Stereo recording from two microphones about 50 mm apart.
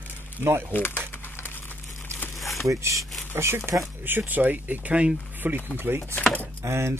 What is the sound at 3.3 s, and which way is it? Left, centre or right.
Speech, right.